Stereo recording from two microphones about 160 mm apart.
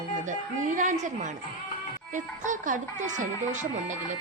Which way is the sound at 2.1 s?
55° right (ahead or behind).